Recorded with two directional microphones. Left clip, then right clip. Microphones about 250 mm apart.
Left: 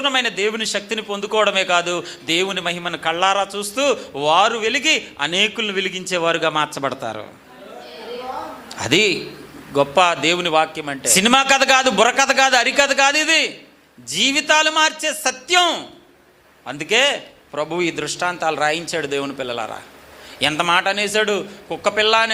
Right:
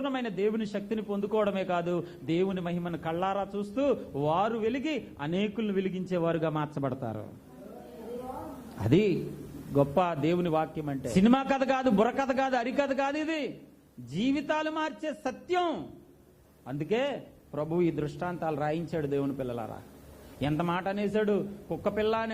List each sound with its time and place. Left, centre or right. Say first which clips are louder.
0.0 s a man's voice: left 12 dB; centre
8.3 s a sound: left 12 dB; centre
8.7 s a man's voice: left 10 dB; centre